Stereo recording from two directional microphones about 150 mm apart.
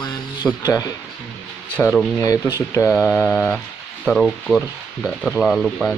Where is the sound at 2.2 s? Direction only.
20° left (ahead or behind).